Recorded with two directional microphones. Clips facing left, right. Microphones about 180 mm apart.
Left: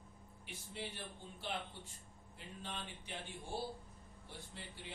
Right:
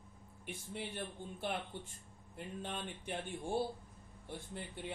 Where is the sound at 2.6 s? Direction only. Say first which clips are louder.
Right 3 dB; 55° right (ahead or behind).